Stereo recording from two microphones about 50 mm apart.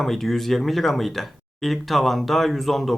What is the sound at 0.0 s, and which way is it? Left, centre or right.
Speech, centre.